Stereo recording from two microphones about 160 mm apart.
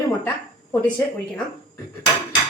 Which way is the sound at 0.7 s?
10° left (ahead or behind).